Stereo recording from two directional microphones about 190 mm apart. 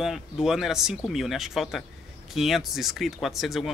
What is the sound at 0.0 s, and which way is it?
Speech, centre (ahead or behind).